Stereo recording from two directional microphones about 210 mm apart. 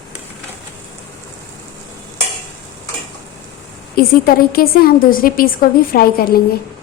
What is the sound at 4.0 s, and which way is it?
A woman's voice, 45° left (ahead or behind).